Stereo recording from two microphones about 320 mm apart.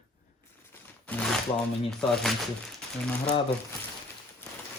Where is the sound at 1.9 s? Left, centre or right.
Centre.